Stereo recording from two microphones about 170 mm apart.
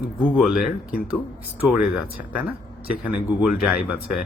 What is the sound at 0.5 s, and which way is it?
Speech, 60° left (ahead or behind).